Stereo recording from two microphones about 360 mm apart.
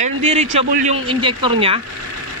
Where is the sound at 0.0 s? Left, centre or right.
Centre.